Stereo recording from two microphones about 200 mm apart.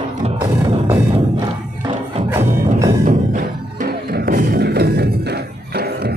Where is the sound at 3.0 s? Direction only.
40° right (ahead or behind).